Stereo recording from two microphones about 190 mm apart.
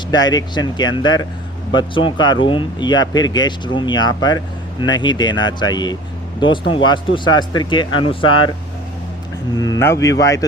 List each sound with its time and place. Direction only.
0.1 s speech: 20° left (ahead or behind)
9.6 s a man's voice: 15° left (ahead or behind)